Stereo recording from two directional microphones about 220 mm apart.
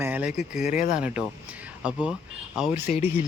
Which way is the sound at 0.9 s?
5° right (ahead or behind).